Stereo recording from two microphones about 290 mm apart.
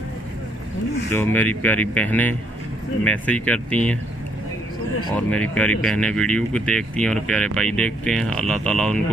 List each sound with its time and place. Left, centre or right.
1.1 s speech: centre
5.1 s speech: centre